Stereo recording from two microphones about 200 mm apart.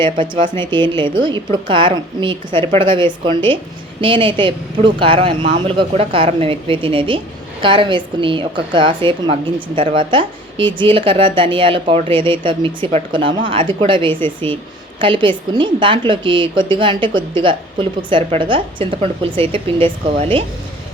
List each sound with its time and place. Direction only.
0.0 s a woman's voice: 25° right (ahead or behind)